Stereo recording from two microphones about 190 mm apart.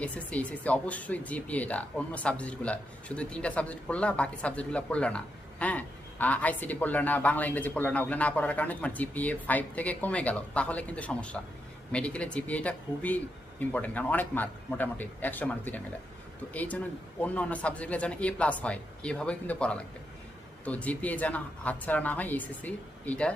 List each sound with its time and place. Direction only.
0.0 s speech: 5° left (ahead or behind)